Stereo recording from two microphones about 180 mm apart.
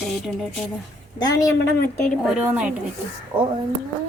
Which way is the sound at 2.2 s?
5° right (ahead or behind).